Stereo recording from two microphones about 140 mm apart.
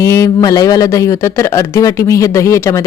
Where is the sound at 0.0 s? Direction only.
20° left (ahead or behind).